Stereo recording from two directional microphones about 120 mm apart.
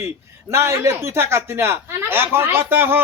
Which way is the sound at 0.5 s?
20° right (ahead or behind).